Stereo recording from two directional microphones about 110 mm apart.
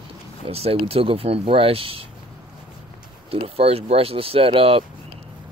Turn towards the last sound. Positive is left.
turn(degrees=-55)  # may be behind; listen again after turning